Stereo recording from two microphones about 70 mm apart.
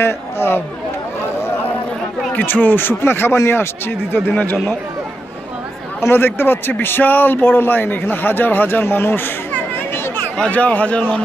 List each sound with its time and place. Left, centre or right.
0.0 s a man's voice: left
2.3 s a man's voice: left
4.1 s speech: left
5.9 s a man's voice: left
10.3 s a man's voice: centre